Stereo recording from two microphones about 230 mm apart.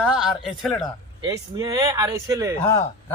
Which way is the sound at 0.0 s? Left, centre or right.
Centre.